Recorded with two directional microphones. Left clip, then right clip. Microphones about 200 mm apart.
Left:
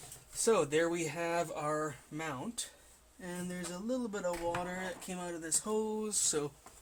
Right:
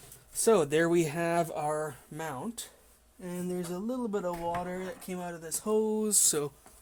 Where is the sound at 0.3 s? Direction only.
55° right (ahead or behind).